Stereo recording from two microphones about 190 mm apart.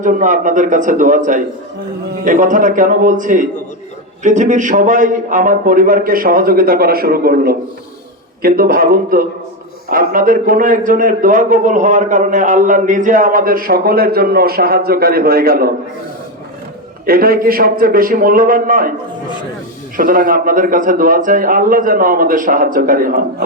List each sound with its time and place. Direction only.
0.0 s a man's voice: 45° right (ahead or behind)
17.1 s a man's voice: 50° right (ahead or behind)
20.0 s a man's voice: 45° right (ahead or behind)